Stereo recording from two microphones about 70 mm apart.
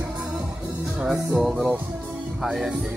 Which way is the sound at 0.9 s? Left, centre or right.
Centre.